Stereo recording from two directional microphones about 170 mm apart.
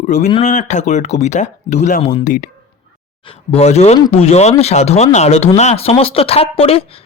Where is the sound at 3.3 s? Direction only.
40° left (ahead or behind).